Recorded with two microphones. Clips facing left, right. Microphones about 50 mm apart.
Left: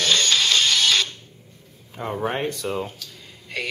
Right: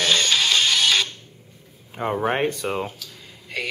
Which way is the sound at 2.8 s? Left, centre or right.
Centre.